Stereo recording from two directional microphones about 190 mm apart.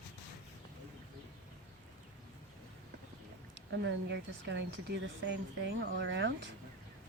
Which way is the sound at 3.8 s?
70° right (ahead or behind).